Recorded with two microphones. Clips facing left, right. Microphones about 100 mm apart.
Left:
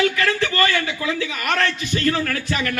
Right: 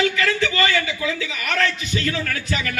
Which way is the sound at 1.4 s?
45° left (ahead or behind).